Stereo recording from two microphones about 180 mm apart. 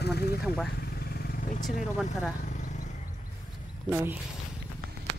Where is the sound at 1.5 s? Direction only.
45° left (ahead or behind).